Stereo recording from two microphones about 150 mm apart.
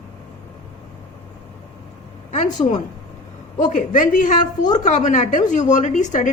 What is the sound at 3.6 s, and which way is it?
A woman's voice, 60° left (ahead or behind).